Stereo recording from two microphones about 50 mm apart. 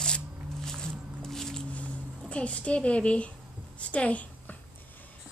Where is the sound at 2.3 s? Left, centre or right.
Left.